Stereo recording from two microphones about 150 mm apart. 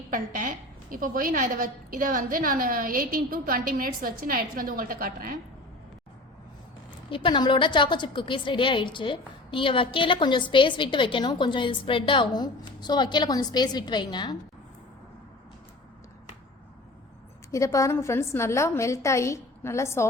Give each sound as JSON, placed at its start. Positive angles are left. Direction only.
{"t": 0.1, "sound": "a woman's voice", "side_deg": -60}
{"t": 7.1, "sound": "a woman's voice", "side_deg": 35}
{"t": 17.5, "sound": "a woman's voice", "side_deg": 20}